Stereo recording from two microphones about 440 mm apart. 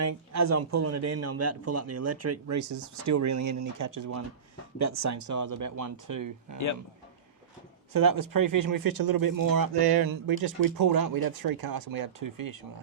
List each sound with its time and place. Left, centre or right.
0.0 s speech: right
7.9 s speech: right